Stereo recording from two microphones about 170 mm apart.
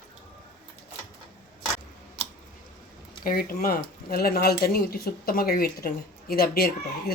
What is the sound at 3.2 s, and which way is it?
Speech, 60° left (ahead or behind).